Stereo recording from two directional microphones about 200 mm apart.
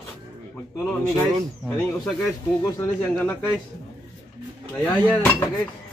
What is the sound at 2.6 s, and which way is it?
Speech, 10° left (ahead or behind).